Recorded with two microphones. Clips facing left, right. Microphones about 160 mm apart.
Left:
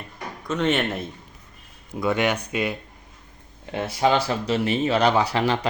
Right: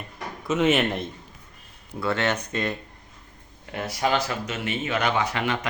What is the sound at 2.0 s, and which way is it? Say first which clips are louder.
Speech: left 3 dB; 15° left (ahead or behind).